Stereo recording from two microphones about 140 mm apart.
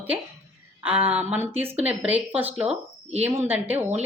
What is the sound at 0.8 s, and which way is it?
A woman's voice, 10° right (ahead or behind).